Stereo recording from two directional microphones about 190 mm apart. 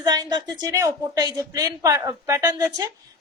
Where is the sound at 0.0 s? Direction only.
20° right (ahead or behind).